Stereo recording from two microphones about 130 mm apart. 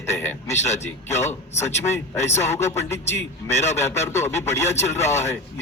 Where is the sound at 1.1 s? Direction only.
20° left (ahead or behind).